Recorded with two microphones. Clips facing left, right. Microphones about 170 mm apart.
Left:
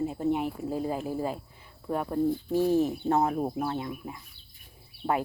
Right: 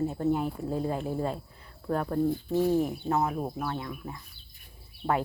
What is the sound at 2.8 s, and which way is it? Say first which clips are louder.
A woman's voice: left 3 dB; 35° left (ahead or behind).